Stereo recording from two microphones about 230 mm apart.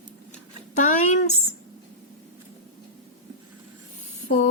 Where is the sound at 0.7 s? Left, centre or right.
Left.